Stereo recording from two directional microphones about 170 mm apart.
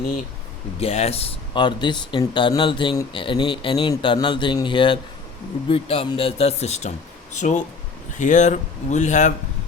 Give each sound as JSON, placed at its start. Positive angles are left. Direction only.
{"t": 0.8, "sound": "speech", "side_deg": 40}